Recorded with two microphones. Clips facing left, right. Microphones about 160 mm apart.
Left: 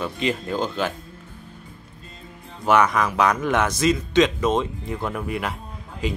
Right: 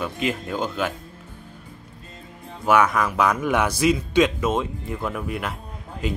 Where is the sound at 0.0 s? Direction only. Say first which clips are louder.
Left 1 dB; 5° right (ahead or behind).